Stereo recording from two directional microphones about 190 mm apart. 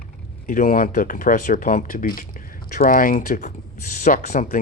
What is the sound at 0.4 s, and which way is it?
Speech, 45° left (ahead or behind).